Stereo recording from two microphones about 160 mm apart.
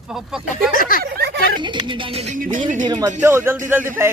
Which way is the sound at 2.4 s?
55° right (ahead or behind).